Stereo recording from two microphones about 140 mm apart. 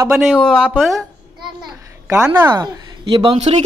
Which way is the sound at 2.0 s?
15° right (ahead or behind).